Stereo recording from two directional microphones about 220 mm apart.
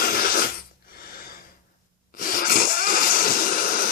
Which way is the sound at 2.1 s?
40° left (ahead or behind).